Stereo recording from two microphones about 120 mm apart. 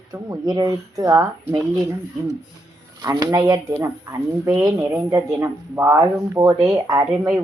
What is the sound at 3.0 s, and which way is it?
Speech, 30° right (ahead or behind).